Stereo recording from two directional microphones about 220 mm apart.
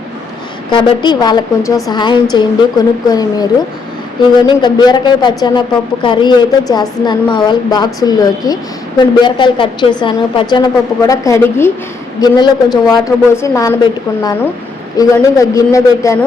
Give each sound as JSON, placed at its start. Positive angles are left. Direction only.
{"t": 0.7, "sound": "speech", "side_deg": 20}
{"t": 14.9, "sound": "speech", "side_deg": 15}